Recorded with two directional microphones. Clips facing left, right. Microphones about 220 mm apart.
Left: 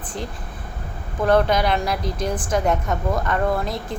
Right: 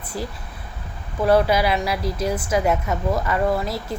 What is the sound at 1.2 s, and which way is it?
A woman's voice, 5° right (ahead or behind).